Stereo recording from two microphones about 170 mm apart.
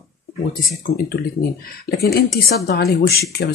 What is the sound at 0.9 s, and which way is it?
Speech, 90° left.